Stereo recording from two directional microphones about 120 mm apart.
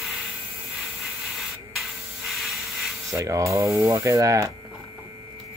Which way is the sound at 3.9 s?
30° right (ahead or behind).